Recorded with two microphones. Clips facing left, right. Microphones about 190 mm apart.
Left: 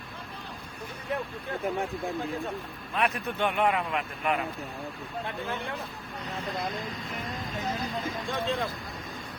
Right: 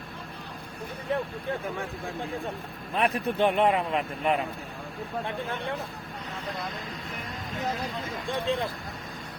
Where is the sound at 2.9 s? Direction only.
35° right (ahead or behind).